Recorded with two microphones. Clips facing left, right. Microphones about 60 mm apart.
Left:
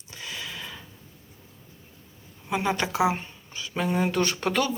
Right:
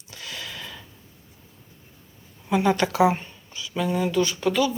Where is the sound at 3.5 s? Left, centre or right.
Left.